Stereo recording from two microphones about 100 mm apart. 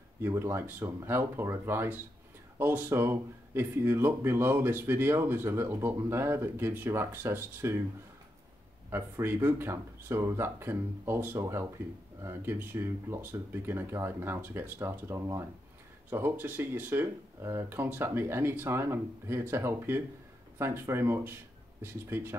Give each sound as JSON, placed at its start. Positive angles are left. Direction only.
{"t": 0.2, "sound": "speech", "side_deg": -25}
{"t": 8.9, "sound": "speech", "side_deg": -20}